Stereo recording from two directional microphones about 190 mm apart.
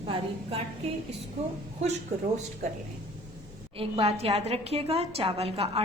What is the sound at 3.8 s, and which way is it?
A woman's voice, 30° right (ahead or behind).